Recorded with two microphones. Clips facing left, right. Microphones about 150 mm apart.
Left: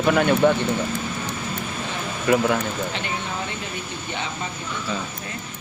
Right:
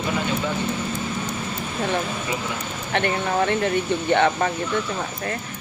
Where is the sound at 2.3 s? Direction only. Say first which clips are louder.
Left 9 dB; 60° left (ahead or behind).